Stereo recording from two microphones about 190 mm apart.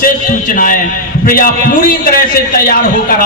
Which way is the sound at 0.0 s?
45° left (ahead or behind).